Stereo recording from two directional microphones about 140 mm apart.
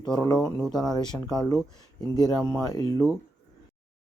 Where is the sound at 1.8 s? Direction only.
30° left (ahead or behind).